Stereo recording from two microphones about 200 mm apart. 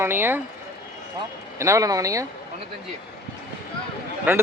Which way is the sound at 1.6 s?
15° right (ahead or behind).